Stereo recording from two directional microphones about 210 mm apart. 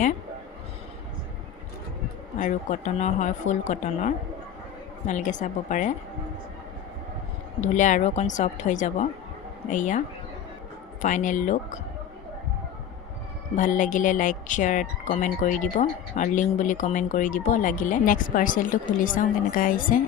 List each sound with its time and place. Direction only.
2.4 s speech: 35° left (ahead or behind)
7.6 s speech: 35° left (ahead or behind)
11.0 s speech: 35° left (ahead or behind)
13.6 s speech: 40° left (ahead or behind)